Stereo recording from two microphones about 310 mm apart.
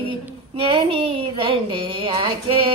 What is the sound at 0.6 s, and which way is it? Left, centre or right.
Speech, centre.